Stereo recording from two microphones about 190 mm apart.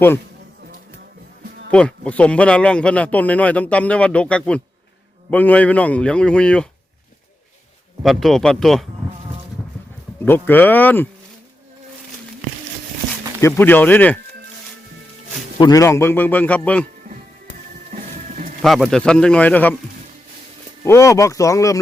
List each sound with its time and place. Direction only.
1.7 s speech: 5° left (ahead or behind)
8.0 s speech: centre (ahead or behind)
10.2 s speech: 10° left (ahead or behind)
13.4 s speech: 10° left (ahead or behind)
15.5 s speech: 20° left (ahead or behind)
17.9 s music: 45° right (ahead or behind)
18.6 s speech: centre (ahead or behind)
20.8 s speech: 15° left (ahead or behind)